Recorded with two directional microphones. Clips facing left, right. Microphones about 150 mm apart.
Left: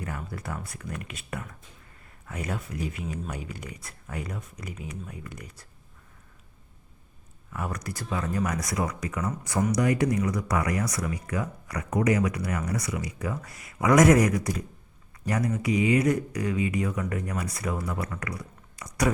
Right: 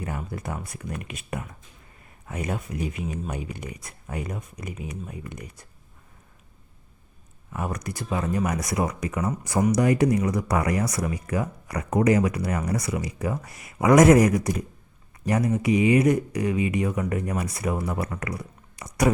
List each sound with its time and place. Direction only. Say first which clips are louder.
0.0 s speech: right 3 dB; 20° right (ahead or behind)
7.5 s speech: right 3 dB; 20° right (ahead or behind)